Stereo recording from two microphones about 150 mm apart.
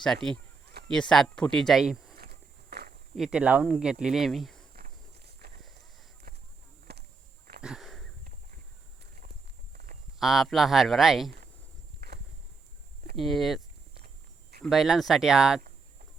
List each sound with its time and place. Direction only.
0.0 s speech: 5° left (ahead or behind)
2.1 s walk: 90° right
3.2 s speech: 5° right (ahead or behind)
4.7 s walk: 90° right
6.3 s a sound: 90° right
7.6 s sniff: centre (ahead or behind)
9.7 s a sound: 70° right (ahead or behind)
10.2 s speech: centre (ahead or behind)
11.9 s a sound: 90° right
13.1 s speech: centre (ahead or behind)
14.6 s speech: centre (ahead or behind)